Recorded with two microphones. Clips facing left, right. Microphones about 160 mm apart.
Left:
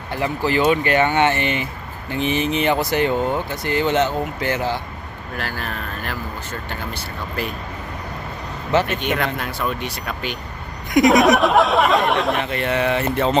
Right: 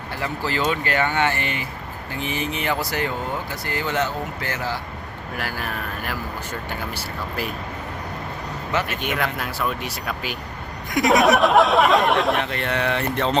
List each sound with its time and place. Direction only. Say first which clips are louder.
0.1 s speech: left 6 dB; 20° left (ahead or behind)
5.4 s speech: left 1 dB; 10° right (ahead or behind)
8.9 s speech: left 3 dB; 5° right (ahead or behind)